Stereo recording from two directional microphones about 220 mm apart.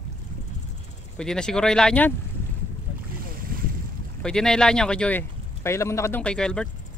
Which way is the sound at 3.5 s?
40° right (ahead or behind).